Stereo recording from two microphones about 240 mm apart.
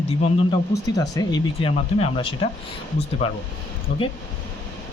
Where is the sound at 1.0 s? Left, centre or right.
Centre.